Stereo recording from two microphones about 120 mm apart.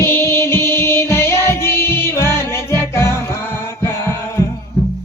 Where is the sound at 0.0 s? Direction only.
20° left (ahead or behind).